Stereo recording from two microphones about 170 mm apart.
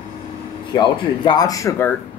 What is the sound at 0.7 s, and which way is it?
Speech, 25° left (ahead or behind).